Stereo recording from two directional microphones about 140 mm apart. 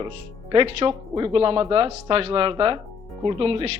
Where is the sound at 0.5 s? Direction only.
40° right (ahead or behind).